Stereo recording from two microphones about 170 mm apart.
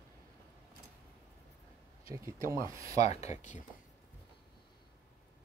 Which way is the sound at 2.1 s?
15° right (ahead or behind).